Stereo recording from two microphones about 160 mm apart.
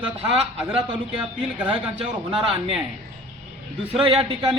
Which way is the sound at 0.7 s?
30° right (ahead or behind).